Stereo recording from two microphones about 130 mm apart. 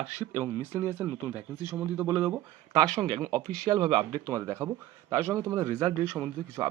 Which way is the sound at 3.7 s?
40° right (ahead or behind).